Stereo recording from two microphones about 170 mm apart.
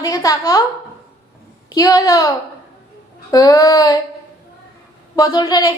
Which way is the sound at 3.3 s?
20° left (ahead or behind).